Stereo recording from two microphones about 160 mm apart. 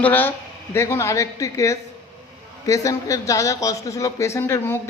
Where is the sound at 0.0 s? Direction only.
10° left (ahead or behind).